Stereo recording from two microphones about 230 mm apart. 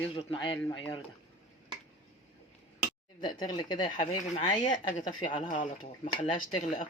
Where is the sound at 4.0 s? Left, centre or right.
Left.